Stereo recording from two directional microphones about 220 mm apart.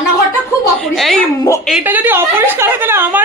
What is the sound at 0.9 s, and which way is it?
A woman's voice, centre (ahead or behind).